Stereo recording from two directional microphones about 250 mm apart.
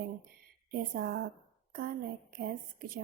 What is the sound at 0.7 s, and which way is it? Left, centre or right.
Speech, right.